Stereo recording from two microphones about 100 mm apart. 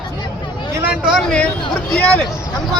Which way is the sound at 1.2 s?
10° left (ahead or behind).